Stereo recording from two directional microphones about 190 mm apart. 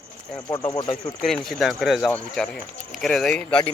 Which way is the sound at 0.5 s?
20° left (ahead or behind).